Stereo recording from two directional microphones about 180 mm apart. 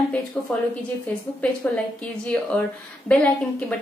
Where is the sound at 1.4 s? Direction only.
5° left (ahead or behind).